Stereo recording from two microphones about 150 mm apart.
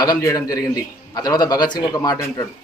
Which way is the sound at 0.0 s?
20° left (ahead or behind).